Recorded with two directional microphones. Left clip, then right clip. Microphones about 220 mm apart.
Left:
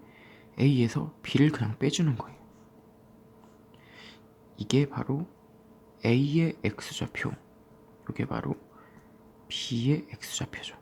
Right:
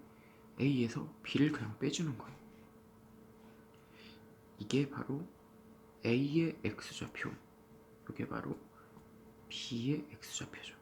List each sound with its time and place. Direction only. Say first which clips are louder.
0.5 s speech: left 8 dB; 45° left (ahead or behind)
4.5 s speech: left 8 dB; 45° left (ahead or behind)
9.5 s speech: left 9 dB; 45° left (ahead or behind)